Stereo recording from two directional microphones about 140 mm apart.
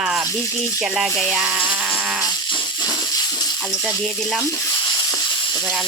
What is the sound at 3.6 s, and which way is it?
Speech, 5° left (ahead or behind).